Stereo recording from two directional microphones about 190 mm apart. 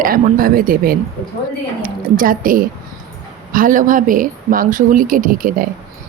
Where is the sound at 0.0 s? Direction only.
50° right (ahead or behind).